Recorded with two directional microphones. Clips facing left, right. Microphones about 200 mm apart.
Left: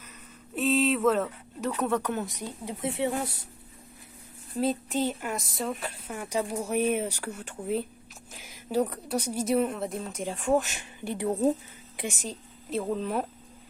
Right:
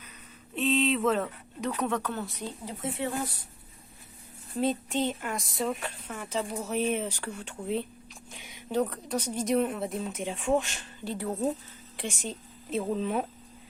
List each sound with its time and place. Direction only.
0.5 s a sound: centre (ahead or behind)
1.8 s speech: 10° left (ahead or behind)
4.5 s a woman's voice: centre (ahead or behind)
11.9 s speech: 5° left (ahead or behind)